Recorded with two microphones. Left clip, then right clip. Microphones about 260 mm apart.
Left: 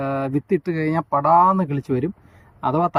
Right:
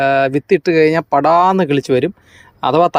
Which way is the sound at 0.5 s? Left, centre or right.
Right.